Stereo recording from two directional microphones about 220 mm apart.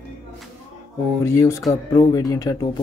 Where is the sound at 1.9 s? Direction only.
15° left (ahead or behind).